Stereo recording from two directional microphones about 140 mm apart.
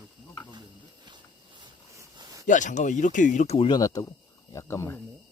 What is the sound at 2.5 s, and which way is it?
Speech, 60° left (ahead or behind).